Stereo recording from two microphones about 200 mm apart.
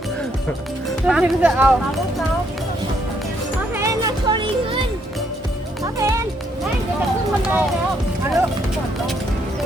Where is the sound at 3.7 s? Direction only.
20° right (ahead or behind).